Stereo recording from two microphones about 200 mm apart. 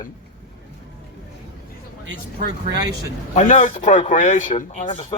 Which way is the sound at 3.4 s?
40° left (ahead or behind).